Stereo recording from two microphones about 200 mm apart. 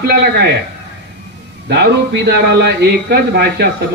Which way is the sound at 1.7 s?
55° right (ahead or behind).